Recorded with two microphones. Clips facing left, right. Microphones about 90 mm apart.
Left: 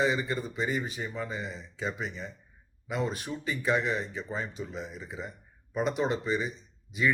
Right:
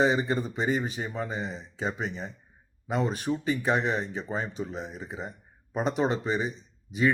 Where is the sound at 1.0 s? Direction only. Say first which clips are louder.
Right 2 dB; 45° right (ahead or behind).